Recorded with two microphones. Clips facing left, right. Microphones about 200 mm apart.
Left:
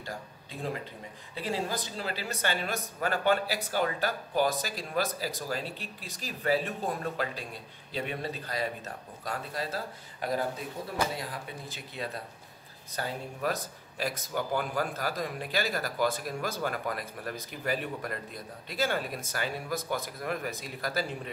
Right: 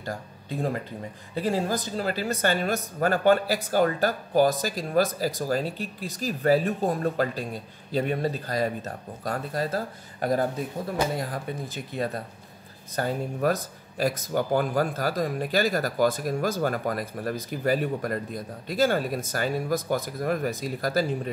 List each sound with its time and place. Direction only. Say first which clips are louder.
0.0 s speech: right 6 dB; 45° right (ahead or behind)